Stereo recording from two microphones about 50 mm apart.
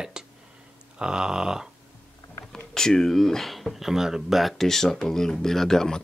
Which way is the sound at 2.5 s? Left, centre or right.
Centre.